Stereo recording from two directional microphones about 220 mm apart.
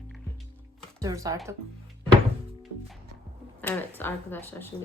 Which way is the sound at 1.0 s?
15° right (ahead or behind).